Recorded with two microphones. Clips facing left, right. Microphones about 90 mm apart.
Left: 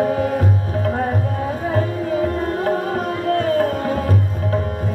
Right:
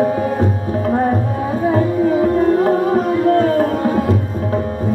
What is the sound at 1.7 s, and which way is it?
Music, 30° right (ahead or behind).